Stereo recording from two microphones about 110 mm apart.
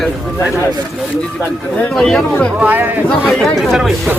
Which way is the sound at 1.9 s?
5° left (ahead or behind).